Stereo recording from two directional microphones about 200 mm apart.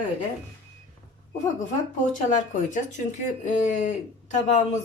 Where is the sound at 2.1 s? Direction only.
40° left (ahead or behind).